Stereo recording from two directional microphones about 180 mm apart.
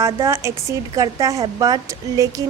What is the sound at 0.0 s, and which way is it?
A woman's voice, 15° right (ahead or behind).